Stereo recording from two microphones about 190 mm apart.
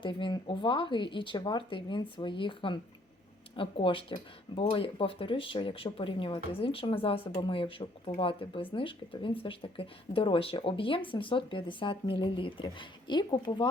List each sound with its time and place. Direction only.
0.0 s speech: 25° left (ahead or behind)